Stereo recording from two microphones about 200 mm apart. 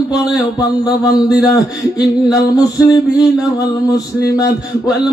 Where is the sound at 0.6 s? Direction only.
20° left (ahead or behind).